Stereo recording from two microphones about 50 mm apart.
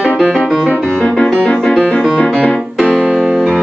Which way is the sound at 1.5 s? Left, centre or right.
Centre.